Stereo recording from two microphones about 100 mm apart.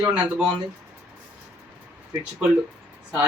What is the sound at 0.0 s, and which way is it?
Speech, 10° right (ahead or behind).